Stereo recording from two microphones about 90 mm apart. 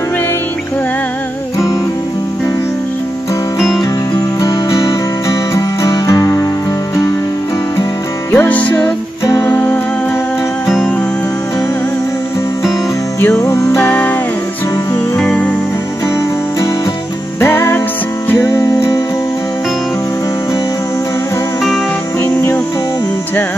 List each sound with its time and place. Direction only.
3.5 s music: centre (ahead or behind)
4.4 s music: 35° left (ahead or behind)
8.3 s music: 20° left (ahead or behind)
13.2 s music: 30° left (ahead or behind)
13.8 s music: 20° left (ahead or behind)
15.1 s music: 15° left (ahead or behind)
17.4 s music: 25° left (ahead or behind)
22.2 s music: 30° left (ahead or behind)